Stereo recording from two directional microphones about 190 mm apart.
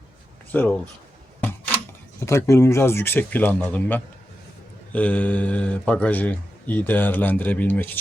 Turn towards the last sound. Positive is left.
turn(degrees=10)  # may be behind; listen again after turning